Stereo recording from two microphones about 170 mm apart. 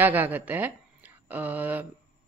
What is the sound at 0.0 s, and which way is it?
Speech, 10° right (ahead or behind).